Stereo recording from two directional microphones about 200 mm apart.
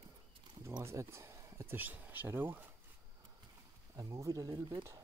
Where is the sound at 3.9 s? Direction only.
15° right (ahead or behind).